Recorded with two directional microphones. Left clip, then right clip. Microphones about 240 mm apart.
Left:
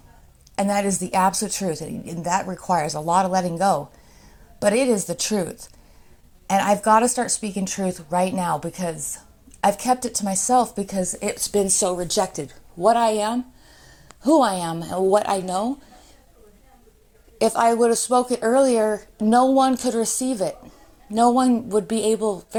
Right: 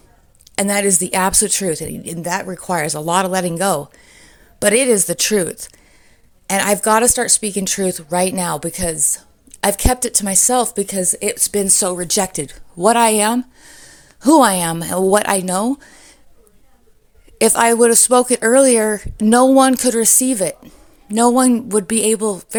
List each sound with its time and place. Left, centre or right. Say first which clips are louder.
0.5 s a woman's voice: right 5 dB; right
17.3 s speech: right 5 dB; right